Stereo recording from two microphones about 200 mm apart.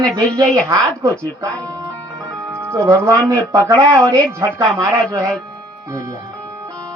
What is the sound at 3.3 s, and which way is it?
Speech, 15° right (ahead or behind).